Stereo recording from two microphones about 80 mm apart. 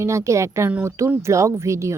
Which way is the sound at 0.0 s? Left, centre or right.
Right.